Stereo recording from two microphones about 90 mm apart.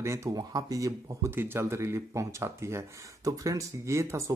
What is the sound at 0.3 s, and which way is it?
Speech, 45° right (ahead or behind).